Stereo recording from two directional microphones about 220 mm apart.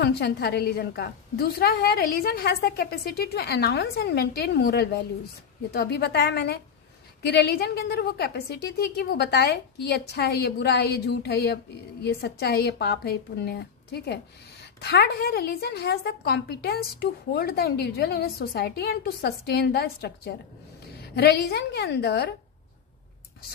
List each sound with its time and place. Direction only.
0.0 s a woman's voice: 45° left (ahead or behind)